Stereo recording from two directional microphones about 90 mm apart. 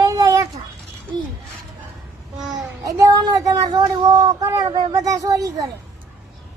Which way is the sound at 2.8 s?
45° right (ahead or behind).